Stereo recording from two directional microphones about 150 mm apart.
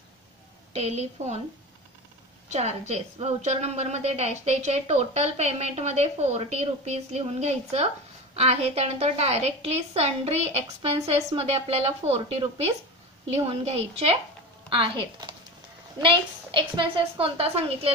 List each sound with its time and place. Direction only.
0.7 s a woman's voice: 45° right (ahead or behind)
2.9 s a woman's voice: 45° right (ahead or behind)